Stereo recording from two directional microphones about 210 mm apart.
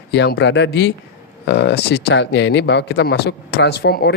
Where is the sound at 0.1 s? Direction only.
55° left (ahead or behind).